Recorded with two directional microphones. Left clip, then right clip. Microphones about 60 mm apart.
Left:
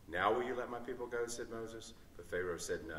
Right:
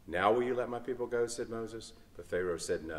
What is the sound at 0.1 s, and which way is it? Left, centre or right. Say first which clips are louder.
A man's voice: right 5 dB; right.